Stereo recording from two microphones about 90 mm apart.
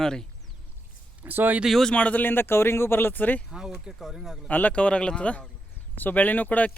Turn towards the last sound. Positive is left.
turn(degrees=15)  # may be behind; listen again after turning